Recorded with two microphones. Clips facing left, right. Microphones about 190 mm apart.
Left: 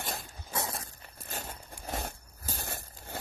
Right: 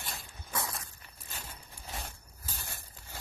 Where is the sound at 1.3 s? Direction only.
55° left (ahead or behind).